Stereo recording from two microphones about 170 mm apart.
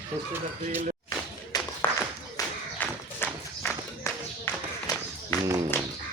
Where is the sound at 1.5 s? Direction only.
25° left (ahead or behind).